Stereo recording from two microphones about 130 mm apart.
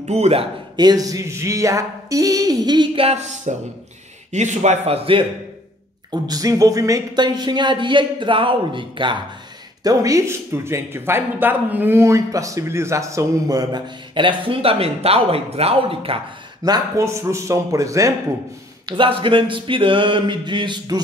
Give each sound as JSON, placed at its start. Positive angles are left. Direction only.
{"t": 0.0, "sound": "speech", "side_deg": -55}
{"t": 0.7, "sound": "a man's voice", "side_deg": -30}
{"t": 3.1, "sound": "speech", "side_deg": -60}
{"t": 6.2, "sound": "speech", "side_deg": -30}
{"t": 9.8, "sound": "a man's voice", "side_deg": -25}
{"t": 16.6, "sound": "a man's voice", "side_deg": -25}
{"t": 18.9, "sound": "speech", "side_deg": -40}